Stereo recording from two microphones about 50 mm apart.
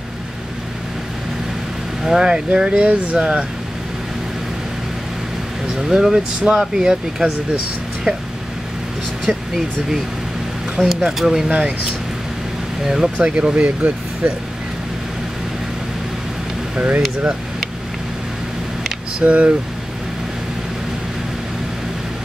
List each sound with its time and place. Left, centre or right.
2.0 s speech: centre
5.8 s speech: centre
10.9 s speech: centre
12.8 s speech: centre
13.2 s speech: right
16.8 s speech: right
19.1 s speech: right